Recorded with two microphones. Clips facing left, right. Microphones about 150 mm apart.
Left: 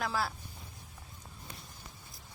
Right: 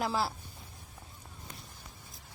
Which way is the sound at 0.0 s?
30° right (ahead or behind).